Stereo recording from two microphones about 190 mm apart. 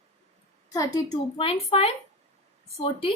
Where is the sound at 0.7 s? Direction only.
15° left (ahead or behind).